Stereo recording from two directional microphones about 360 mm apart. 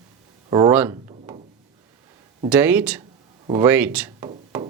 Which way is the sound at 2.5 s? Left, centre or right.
Centre.